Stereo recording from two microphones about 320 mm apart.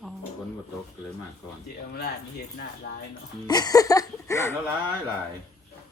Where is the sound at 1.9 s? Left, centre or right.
Left.